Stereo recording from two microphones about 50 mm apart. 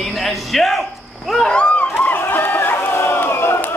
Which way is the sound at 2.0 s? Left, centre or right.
Left.